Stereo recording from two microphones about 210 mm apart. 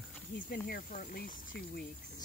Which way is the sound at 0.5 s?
40° left (ahead or behind).